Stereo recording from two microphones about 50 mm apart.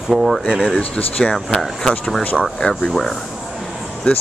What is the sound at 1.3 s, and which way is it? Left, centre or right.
Speech, centre.